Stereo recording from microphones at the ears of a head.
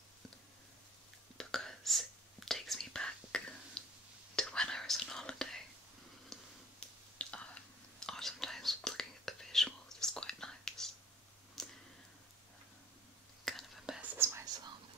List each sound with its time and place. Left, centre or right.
1.4 s whispering: centre
13.5 s whispering: centre
14.0 s whispering: right